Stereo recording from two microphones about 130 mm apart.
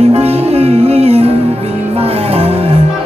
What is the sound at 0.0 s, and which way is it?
Music, 50° right (ahead or behind).